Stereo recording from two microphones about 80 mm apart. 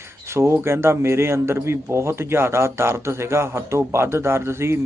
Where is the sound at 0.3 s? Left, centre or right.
Right.